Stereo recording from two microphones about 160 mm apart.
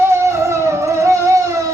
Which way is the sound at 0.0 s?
15° right (ahead or behind).